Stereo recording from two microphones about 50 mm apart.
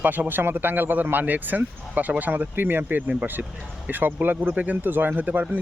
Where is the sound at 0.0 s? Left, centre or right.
Right.